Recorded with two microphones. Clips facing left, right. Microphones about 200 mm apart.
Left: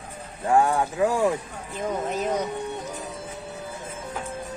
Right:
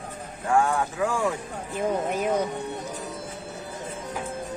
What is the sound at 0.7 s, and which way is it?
Speech, 35° left (ahead or behind).